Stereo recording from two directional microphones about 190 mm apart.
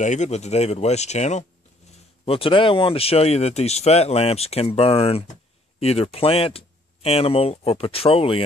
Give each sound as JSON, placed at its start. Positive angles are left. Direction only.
{"t": 0.0, "sound": "speech", "side_deg": 40}